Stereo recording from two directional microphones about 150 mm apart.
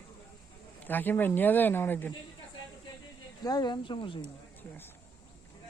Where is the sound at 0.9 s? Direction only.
10° left (ahead or behind).